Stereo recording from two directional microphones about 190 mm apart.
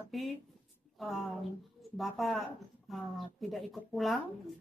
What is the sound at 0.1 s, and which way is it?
Speech, centre (ahead or behind).